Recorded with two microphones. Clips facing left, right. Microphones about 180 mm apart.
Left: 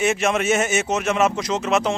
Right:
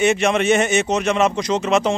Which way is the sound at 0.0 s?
Centre (ahead or behind).